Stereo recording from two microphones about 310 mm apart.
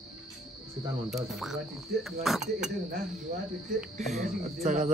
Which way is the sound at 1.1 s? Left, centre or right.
Centre.